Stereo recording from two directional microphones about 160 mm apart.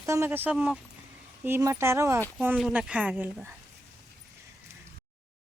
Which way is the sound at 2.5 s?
5° right (ahead or behind).